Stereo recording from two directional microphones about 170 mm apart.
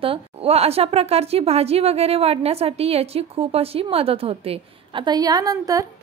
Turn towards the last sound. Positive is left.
turn(degrees=-20)  # may be behind; listen again after turning